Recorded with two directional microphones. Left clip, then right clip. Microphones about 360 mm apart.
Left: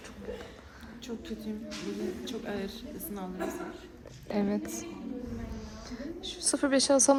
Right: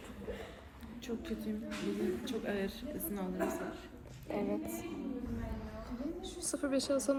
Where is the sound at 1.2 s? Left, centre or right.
Centre.